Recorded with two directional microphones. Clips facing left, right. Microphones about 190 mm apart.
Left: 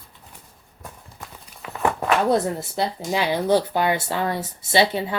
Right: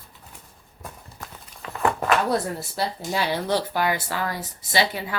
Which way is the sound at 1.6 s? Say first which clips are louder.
Even; 10° left (ahead or behind).